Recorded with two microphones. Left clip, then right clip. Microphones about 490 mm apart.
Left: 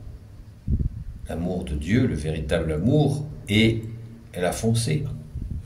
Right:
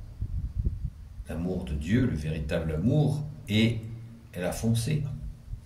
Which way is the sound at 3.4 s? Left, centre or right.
Right.